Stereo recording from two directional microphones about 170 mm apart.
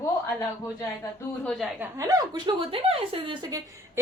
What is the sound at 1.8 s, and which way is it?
A woman's voice, 20° right (ahead or behind).